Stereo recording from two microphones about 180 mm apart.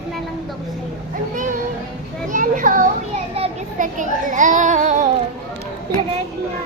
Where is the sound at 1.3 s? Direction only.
45° right (ahead or behind).